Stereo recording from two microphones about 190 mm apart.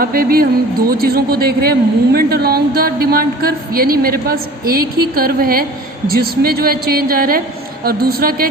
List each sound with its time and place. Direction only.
0.0 s speech: 50° right (ahead or behind)